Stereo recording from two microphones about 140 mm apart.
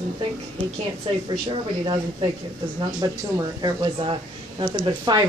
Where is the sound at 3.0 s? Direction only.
25° right (ahead or behind).